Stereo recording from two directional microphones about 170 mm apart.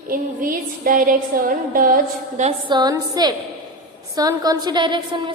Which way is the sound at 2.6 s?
25° right (ahead or behind).